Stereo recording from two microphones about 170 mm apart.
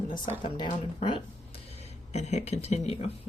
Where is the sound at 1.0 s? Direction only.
35° left (ahead or behind).